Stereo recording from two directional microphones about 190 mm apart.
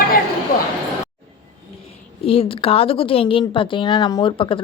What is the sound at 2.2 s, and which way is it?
A woman's voice, 30° left (ahead or behind).